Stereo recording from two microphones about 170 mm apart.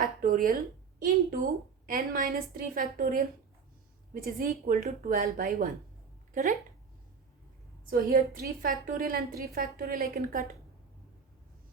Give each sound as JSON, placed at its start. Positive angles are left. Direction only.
{"t": 0.0, "sound": "a woman's voice", "side_deg": -55}
{"t": 7.9, "sound": "a woman's voice", "side_deg": -55}